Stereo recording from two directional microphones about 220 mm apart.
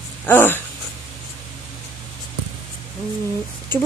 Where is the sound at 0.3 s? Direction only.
10° left (ahead or behind).